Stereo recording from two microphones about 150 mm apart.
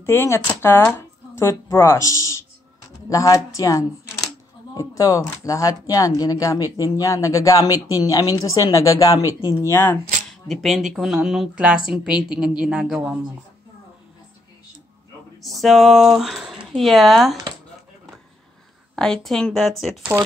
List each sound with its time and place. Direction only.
0.0 s a woman's voice: 15° left (ahead or behind)
10.5 s speech: centre (ahead or behind)
15.4 s speech: centre (ahead or behind)
18.9 s speech: 5° left (ahead or behind)